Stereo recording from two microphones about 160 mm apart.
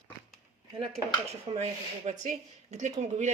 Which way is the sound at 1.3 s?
40° right (ahead or behind).